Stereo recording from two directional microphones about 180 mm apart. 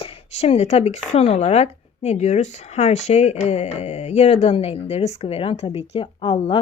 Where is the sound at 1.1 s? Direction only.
35° left (ahead or behind).